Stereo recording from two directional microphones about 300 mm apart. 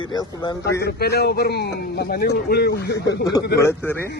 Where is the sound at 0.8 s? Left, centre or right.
Left.